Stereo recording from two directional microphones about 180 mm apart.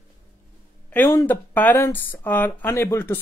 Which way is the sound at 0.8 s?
10° left (ahead or behind).